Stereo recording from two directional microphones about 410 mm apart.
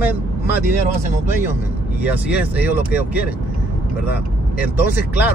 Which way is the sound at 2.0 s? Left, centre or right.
Centre.